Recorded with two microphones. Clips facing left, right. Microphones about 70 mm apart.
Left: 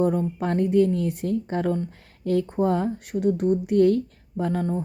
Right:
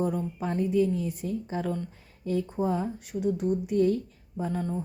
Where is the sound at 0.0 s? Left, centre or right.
Left.